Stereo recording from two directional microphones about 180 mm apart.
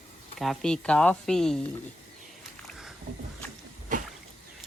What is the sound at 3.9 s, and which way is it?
Rowboat, 45° right (ahead or behind).